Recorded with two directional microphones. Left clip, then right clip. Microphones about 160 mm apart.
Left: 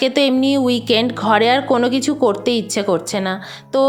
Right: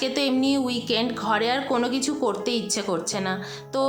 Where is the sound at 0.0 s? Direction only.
40° left (ahead or behind).